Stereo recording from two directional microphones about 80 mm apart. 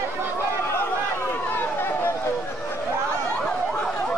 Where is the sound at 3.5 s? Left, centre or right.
Centre.